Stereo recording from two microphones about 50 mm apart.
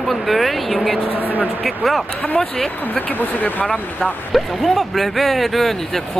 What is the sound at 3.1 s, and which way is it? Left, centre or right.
Speech, left.